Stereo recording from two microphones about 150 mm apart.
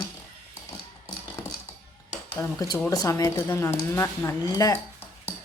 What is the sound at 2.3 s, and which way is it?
Speech, 25° left (ahead or behind).